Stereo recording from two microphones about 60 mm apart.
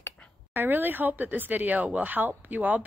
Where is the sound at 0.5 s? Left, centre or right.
Right.